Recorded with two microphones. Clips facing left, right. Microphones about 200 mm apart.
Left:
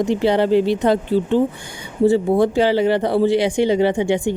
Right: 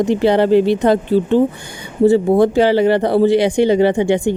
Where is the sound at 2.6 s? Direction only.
70° right (ahead or behind).